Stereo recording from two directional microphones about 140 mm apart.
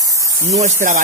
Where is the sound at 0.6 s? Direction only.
65° right (ahead or behind).